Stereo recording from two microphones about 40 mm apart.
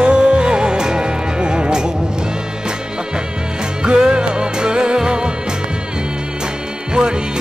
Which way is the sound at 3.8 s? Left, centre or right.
Right.